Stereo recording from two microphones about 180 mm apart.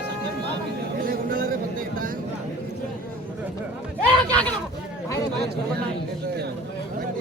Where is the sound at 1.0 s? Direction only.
55° right (ahead or behind).